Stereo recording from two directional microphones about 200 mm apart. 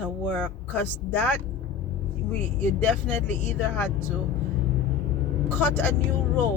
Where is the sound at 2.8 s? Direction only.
10° left (ahead or behind).